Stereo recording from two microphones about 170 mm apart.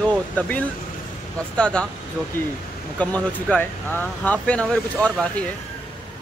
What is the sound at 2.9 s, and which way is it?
Speech, 10° left (ahead or behind).